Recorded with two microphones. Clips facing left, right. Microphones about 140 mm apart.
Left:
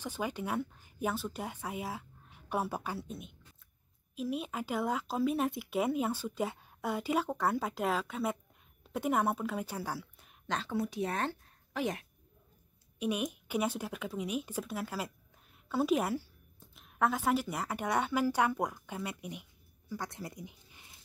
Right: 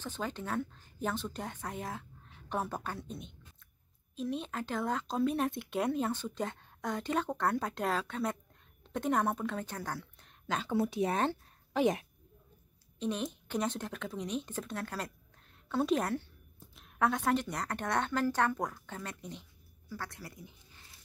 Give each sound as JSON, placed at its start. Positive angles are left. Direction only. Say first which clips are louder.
{"t": 0.0, "sound": "a woman's voice", "louder": "left 2 dB", "side_deg": 10}
{"t": 10.4, "sound": "a woman's voice", "louder": "right 1 dB", "side_deg": -5}
{"t": 10.7, "sound": "a woman's voice", "louder": "right 5 dB", "side_deg": -25}
{"t": 13.0, "sound": "speech", "louder": "left 1 dB", "side_deg": 10}